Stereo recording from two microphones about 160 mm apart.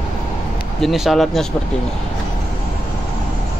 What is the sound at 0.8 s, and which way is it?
Speech, centre (ahead or behind).